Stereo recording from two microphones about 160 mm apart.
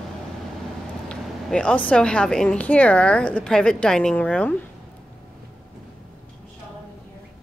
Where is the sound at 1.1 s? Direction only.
5° left (ahead or behind).